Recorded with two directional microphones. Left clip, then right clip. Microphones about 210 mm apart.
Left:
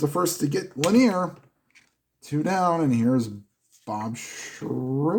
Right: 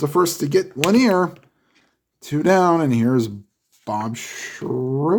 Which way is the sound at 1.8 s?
15° left (ahead or behind).